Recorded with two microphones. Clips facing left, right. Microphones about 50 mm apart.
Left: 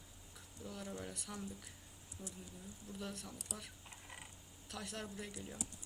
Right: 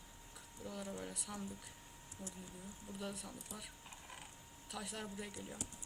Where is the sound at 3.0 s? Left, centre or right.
Centre.